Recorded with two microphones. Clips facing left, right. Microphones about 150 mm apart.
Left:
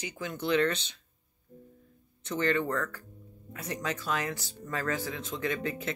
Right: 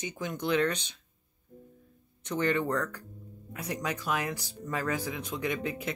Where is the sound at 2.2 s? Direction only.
15° right (ahead or behind).